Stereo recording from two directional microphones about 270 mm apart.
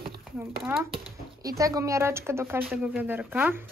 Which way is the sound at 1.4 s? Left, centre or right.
Centre.